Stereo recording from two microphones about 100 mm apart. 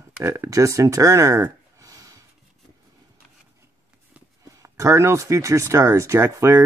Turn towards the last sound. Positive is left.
turn(degrees=-30)  # may be behind; listen again after turning